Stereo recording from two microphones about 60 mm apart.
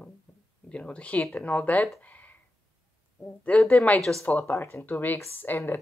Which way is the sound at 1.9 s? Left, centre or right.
Left.